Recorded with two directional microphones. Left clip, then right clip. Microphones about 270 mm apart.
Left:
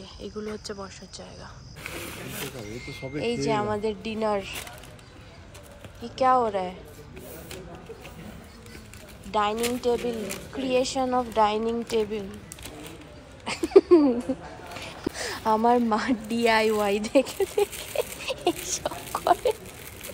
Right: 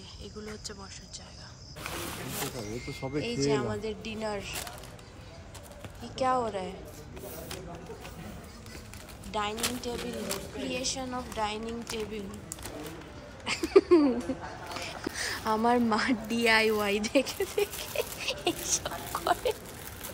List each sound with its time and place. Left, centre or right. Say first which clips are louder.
0.2 s a woman's voice: left 8 dB; centre
2.8 s speech: left 3 dB; right
3.3 s a woman's voice: left 5 dB; centre
6.1 s a woman's voice: left 7 dB; centre
9.3 s a woman's voice: left 7 dB; centre
13.5 s a sound: left 4 dB; centre
15.0 s a woman's voice: left 6 dB; centre